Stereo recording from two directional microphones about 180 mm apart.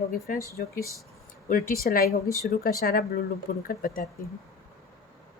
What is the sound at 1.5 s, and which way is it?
Speech, 50° left (ahead or behind).